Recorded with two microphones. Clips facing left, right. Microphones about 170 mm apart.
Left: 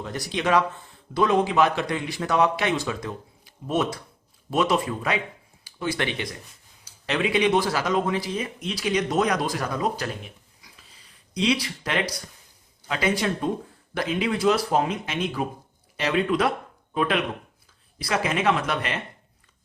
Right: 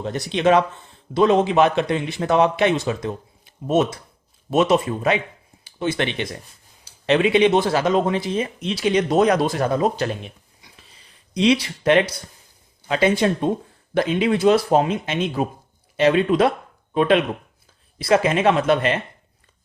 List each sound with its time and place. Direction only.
0.0 s a man's voice: 25° right (ahead or behind)